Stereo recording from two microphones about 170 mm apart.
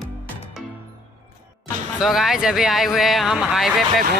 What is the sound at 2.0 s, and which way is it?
Speech, centre (ahead or behind).